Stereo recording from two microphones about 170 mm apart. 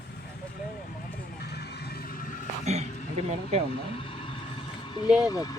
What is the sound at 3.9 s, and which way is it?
Vehicle, 30° left (ahead or behind).